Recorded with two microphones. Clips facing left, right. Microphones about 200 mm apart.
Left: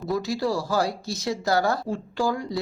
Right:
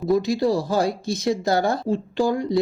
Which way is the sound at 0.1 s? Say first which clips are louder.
Right 6 dB; 20° right (ahead or behind).